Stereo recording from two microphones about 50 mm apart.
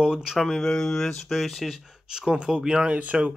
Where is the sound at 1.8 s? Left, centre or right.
Centre.